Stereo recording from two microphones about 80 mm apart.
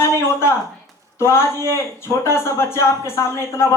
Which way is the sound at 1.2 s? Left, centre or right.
Left.